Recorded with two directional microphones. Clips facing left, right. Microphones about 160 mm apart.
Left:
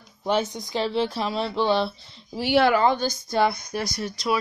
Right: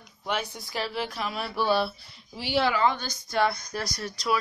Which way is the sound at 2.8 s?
35° left (ahead or behind).